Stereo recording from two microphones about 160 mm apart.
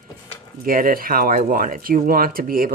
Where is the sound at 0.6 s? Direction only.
60° right (ahead or behind).